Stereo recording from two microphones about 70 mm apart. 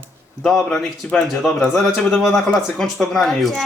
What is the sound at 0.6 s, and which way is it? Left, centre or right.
Speech, centre.